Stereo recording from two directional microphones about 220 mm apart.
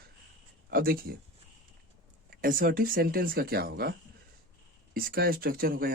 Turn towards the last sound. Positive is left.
turn(degrees=-40)  # may be behind; listen again after turning